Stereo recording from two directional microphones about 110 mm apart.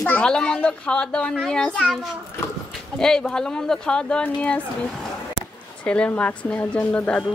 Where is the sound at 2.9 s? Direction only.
5° left (ahead or behind).